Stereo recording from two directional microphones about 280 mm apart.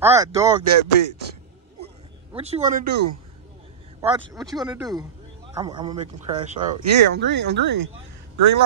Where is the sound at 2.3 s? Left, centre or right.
Right.